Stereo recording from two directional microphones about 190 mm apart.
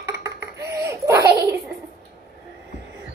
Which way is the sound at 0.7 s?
15° right (ahead or behind).